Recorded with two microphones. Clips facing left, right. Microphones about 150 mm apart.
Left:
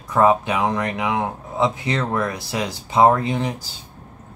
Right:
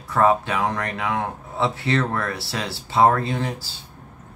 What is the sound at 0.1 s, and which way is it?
A man's voice, 15° left (ahead or behind).